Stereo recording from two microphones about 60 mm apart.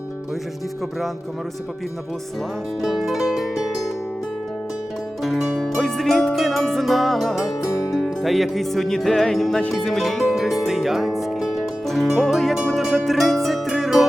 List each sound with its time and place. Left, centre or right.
2.8 s music: centre
5.2 s music: centre